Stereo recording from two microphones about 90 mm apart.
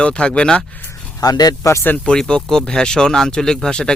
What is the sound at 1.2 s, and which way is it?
Speech, 45° left (ahead or behind).